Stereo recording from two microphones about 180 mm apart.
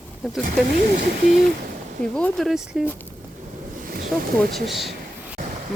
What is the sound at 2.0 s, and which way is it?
Speech, 5° left (ahead or behind).